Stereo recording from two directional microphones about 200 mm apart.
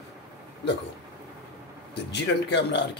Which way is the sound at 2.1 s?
60° left (ahead or behind).